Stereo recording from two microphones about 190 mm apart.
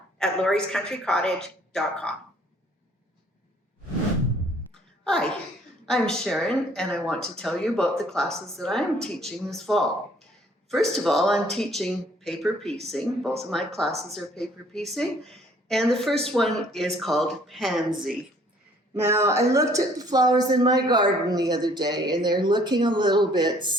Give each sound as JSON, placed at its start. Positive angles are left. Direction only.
{"t": 0.2, "sound": "speech", "side_deg": 5}
{"t": 5.0, "sound": "speech", "side_deg": 5}
{"t": 18.9, "sound": "a woman's voice", "side_deg": -15}